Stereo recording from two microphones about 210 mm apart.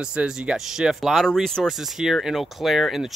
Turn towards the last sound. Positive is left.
turn(degrees=0)  # may be behind; listen again after turning